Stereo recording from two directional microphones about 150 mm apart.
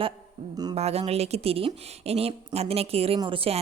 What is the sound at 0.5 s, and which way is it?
Speech, 25° right (ahead or behind).